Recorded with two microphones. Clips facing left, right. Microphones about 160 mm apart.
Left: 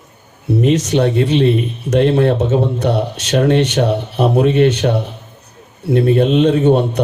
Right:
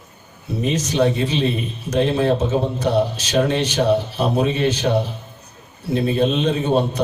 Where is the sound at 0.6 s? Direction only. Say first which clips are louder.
Left 4 dB; 70° left (ahead or behind).